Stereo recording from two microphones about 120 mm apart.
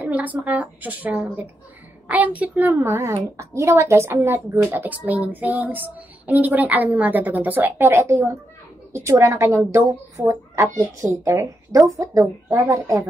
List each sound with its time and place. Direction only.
0.0 s a woman's voice: 15° right (ahead or behind)